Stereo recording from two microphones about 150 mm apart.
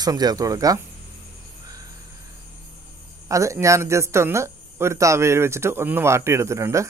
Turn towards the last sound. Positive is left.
turn(degrees=-20)  # may be behind; listen again after turning